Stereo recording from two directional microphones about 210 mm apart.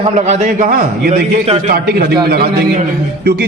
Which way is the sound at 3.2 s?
50° right (ahead or behind).